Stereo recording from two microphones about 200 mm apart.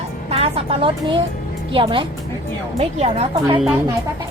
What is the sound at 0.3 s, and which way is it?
A woman's voice, 30° right (ahead or behind).